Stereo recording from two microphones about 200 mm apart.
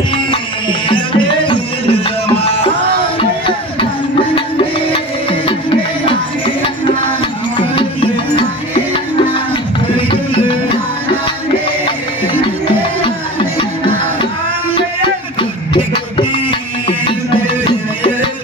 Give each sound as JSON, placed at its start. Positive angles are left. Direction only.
{"t": 0.8, "sound": "music", "side_deg": 25}
{"t": 4.4, "sound": "music", "side_deg": 25}
{"t": 9.9, "sound": "music", "side_deg": 25}
{"t": 15.7, "sound": "music", "side_deg": 25}